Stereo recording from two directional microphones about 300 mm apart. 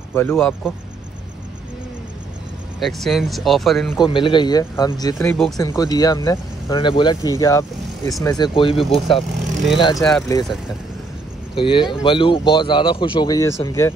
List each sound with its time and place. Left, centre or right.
0.1 s speech: centre
2.8 s speech: centre
4.0 s speech: centre
8.9 s speech: centre
9.8 s speech: centre
11.5 s speech: centre